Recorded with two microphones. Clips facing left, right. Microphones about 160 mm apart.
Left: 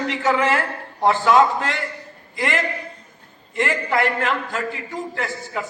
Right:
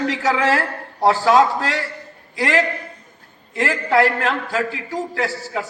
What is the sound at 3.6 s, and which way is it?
A man's voice, 35° right (ahead or behind).